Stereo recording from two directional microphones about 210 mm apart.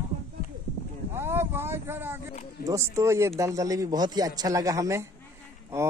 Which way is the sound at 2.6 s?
15° right (ahead or behind).